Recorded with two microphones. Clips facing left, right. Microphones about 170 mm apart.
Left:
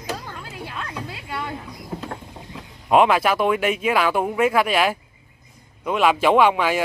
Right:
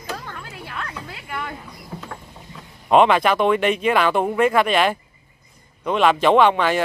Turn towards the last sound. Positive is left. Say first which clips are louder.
# right 1 dB
turn(degrees=5)  # may be behind; listen again after turning